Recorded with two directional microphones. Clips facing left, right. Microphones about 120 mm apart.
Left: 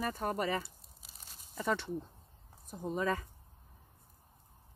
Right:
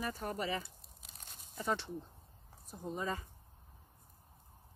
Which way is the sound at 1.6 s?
60° left (ahead or behind).